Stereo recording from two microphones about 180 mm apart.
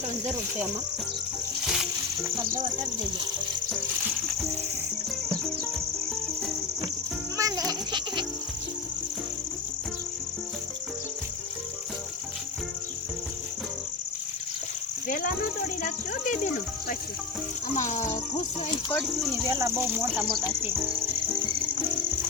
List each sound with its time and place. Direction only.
1.6 s music: centre (ahead or behind)
7.3 s goat: 20° right (ahead or behind)
15.0 s snake: 50° left (ahead or behind)
17.7 s speech: 45° left (ahead or behind)
19.0 s cricket: centre (ahead or behind)
19.5 s speech: 20° right (ahead or behind)
20.1 s cricket: centre (ahead or behind)